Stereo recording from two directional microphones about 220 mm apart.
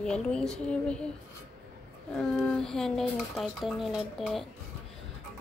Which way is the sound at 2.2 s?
5° left (ahead or behind).